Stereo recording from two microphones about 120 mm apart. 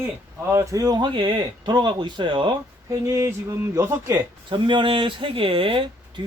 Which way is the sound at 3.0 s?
25° right (ahead or behind).